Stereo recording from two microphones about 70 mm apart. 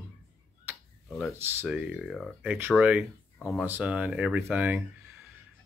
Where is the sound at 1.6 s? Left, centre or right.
Centre.